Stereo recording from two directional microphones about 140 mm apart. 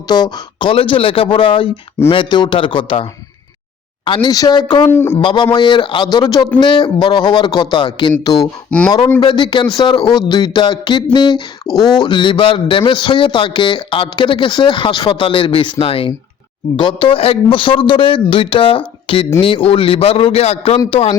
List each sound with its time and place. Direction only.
0.1 s a man's voice: 30° left (ahead or behind)
4.9 s speech: 15° left (ahead or behind)
5.1 s a man's voice: 35° left (ahead or behind)
8.7 s speech: 10° left (ahead or behind)
9.2 s a man's voice: 35° left (ahead or behind)